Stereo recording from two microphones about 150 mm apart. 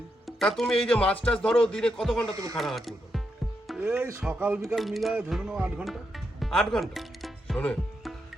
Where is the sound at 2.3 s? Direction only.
20° right (ahead or behind).